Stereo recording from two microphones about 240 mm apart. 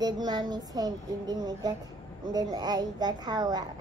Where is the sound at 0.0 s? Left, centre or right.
Centre.